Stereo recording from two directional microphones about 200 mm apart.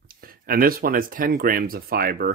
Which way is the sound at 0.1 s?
45° right (ahead or behind).